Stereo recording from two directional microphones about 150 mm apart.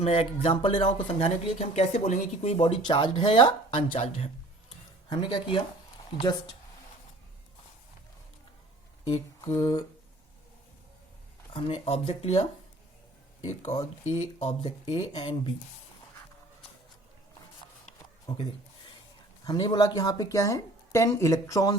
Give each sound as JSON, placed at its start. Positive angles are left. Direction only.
{"t": 0.0, "sound": "speech", "side_deg": 40}
{"t": 5.0, "sound": "speech", "side_deg": 30}
{"t": 9.1, "sound": "speech", "side_deg": 20}
{"t": 11.5, "sound": "speech", "side_deg": 40}
{"t": 14.0, "sound": "speech", "side_deg": 45}
{"t": 18.3, "sound": "speech", "side_deg": 25}
{"t": 19.5, "sound": "speech", "side_deg": 25}